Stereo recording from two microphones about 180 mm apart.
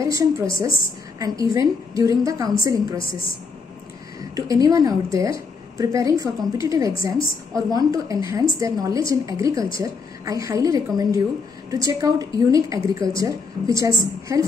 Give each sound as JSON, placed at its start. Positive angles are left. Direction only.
{"t": 0.0, "sound": "a woman's voice", "side_deg": -20}
{"t": 4.4, "sound": "a woman's voice", "side_deg": -20}